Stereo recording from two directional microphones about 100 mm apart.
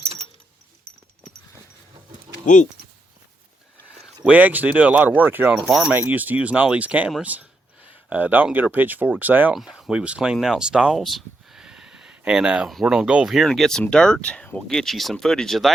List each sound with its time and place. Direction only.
4.2 s speech: 15° right (ahead or behind)
5.6 s speech: centre (ahead or behind)
5.9 s speech: 20° right (ahead or behind)
9.6 s speech: 5° right (ahead or behind)